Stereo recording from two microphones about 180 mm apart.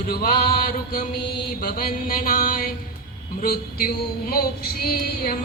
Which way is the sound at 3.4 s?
55° left (ahead or behind).